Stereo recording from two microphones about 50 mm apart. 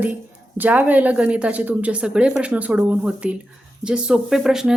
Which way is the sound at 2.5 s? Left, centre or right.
Right.